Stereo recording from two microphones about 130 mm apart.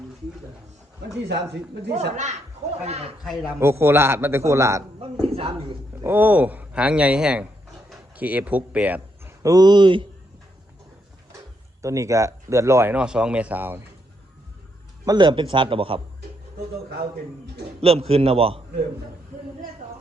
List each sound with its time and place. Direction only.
1.9 s a man's voice: 60° right (ahead or behind)
3.2 s a man's voice: centre (ahead or behind)
3.6 s a man's voice: 20° right (ahead or behind)
5.2 s a man's voice: 50° right (ahead or behind)
6.0 s speech: 15° right (ahead or behind)
9.4 s a man's voice: 30° right (ahead or behind)
11.8 s speech: 25° right (ahead or behind)
15.0 s a man's voice: 35° right (ahead or behind)
17.7 s a man's voice: 50° right (ahead or behind)